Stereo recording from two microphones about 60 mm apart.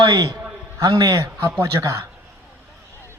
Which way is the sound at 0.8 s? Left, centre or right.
Right.